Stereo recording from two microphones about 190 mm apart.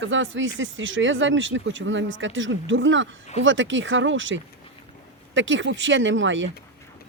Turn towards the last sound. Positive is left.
turn(degrees=-80)